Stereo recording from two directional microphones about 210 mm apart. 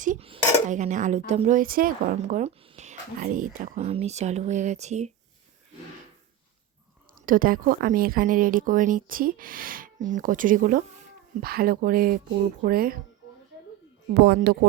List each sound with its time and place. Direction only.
0.0 s dishes: 40° right (ahead or behind)
1.3 s speech: 35° right (ahead or behind)
7.2 s speech: 40° right (ahead or behind)
14.1 s speech: 50° right (ahead or behind)